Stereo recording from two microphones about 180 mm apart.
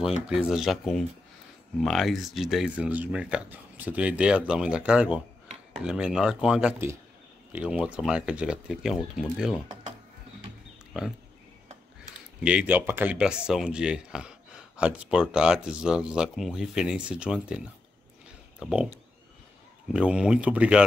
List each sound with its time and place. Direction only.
0.0 s speech: 5° right (ahead or behind)
10.9 s speech: centre (ahead or behind)
12.4 s speech: 10° right (ahead or behind)
19.9 s speech: 5° right (ahead or behind)